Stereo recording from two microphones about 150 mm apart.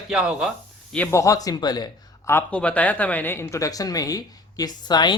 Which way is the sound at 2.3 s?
10° left (ahead or behind).